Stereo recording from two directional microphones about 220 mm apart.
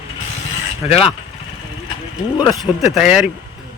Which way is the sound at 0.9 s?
25° left (ahead or behind).